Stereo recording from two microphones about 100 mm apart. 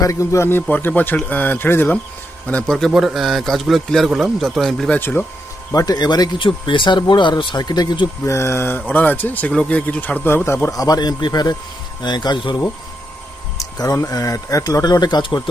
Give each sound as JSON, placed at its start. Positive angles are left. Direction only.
{"t": 0.0, "sound": "a man's voice", "side_deg": 30}
{"t": 2.5, "sound": "a man's voice", "side_deg": 10}
{"t": 4.9, "sound": "a man's voice", "side_deg": 20}
{"t": 5.7, "sound": "speech", "side_deg": 40}
{"t": 6.4, "sound": "speech", "side_deg": 55}
{"t": 8.2, "sound": "a man's voice", "side_deg": 30}
{"t": 13.6, "sound": "speech", "side_deg": 35}